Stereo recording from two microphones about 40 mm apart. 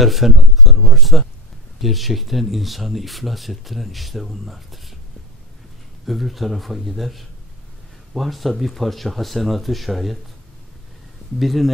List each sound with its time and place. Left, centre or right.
0.0 s a sound: centre
1.8 s speech: centre
6.0 s speech: centre
11.3 s speech: centre